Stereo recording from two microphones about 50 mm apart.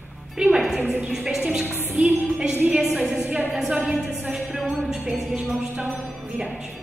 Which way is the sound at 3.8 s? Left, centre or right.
Centre.